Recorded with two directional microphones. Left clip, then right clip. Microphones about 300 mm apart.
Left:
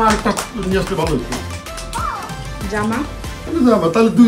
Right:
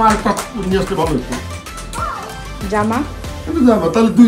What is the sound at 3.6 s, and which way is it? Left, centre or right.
Speech, centre.